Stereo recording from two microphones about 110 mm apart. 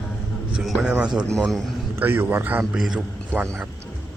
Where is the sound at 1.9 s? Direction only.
20° right (ahead or behind).